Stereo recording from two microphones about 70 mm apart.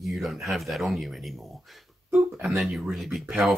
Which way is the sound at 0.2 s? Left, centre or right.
Centre.